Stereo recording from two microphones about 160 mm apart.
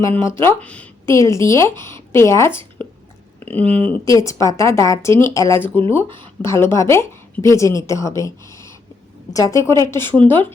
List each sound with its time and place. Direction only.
0.0 s a woman's voice: 15° left (ahead or behind)
4.0 s a woman's voice: 20° left (ahead or behind)